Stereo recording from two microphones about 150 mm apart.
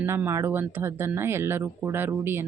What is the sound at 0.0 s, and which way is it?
Speech, 15° right (ahead or behind).